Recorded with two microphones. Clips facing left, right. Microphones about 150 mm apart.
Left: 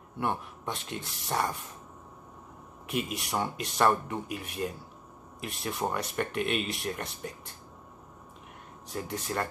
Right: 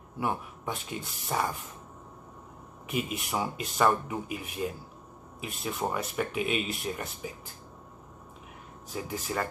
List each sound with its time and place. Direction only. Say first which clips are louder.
0.2 s speech: even; 5° right (ahead or behind)
2.9 s speech: even; centre (ahead or behind)
8.9 s speech: even; 5° right (ahead or behind)